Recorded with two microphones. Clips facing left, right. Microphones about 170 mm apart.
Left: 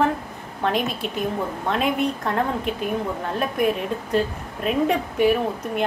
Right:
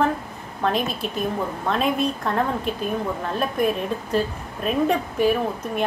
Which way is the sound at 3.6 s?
15° left (ahead or behind).